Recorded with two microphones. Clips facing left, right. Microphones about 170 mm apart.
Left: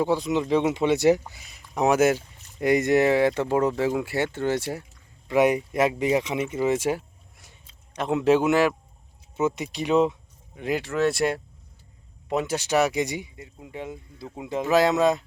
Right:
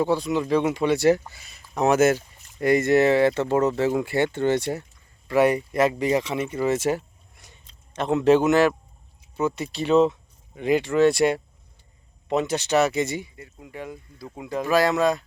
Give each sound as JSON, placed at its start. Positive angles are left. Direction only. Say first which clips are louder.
{"t": 0.0, "sound": "speech", "louder": "right 1 dB", "side_deg": 15}